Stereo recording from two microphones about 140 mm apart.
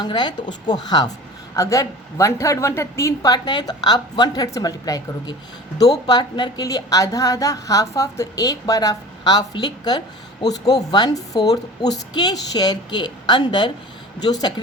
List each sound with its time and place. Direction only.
0.0 s a woman's voice: 30° left (ahead or behind)